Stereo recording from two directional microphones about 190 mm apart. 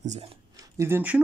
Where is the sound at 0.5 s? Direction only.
15° right (ahead or behind).